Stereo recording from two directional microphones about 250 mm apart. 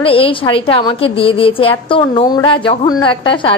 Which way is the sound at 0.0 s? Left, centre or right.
Left.